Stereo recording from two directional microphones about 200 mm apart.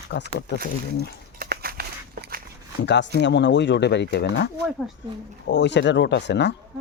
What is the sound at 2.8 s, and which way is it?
Speech, 60° left (ahead or behind).